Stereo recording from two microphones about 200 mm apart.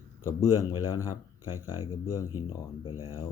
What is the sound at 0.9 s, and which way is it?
Speech, 15° left (ahead or behind).